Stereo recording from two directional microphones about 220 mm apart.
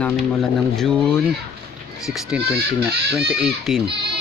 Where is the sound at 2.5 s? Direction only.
45° right (ahead or behind).